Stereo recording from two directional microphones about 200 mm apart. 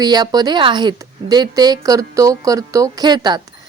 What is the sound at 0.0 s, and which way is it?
A woman's voice, 20° right (ahead or behind).